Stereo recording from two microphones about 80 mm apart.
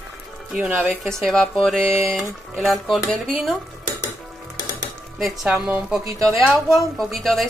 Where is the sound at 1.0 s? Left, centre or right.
Centre.